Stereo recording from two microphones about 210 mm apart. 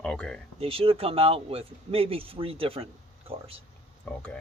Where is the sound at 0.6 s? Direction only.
25° right (ahead or behind).